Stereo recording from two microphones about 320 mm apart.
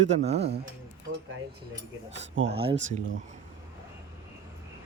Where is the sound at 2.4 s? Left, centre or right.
Right.